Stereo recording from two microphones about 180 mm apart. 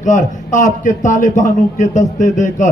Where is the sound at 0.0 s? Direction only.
45° left (ahead or behind).